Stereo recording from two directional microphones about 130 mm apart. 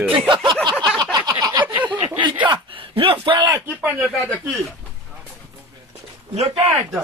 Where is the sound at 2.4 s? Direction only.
40° right (ahead or behind).